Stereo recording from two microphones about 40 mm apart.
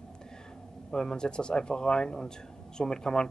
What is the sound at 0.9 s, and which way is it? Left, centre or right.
A man's voice, centre.